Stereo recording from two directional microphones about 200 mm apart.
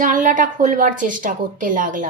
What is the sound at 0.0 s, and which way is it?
A woman's voice, 40° right (ahead or behind).